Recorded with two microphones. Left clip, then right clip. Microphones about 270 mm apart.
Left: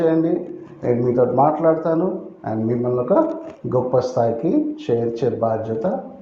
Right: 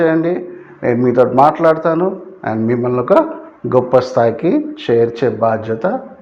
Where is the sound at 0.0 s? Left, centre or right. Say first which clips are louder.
Right 4 dB; right.